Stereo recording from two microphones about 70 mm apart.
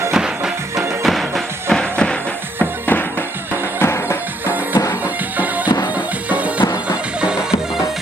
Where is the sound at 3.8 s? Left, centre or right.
Left.